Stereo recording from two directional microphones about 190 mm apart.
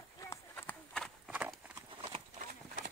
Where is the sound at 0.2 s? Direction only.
10° left (ahead or behind).